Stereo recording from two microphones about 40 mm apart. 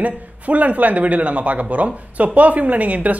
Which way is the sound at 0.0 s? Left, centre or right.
Right.